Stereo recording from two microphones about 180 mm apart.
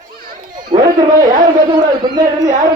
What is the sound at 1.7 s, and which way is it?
Speech, 20° right (ahead or behind).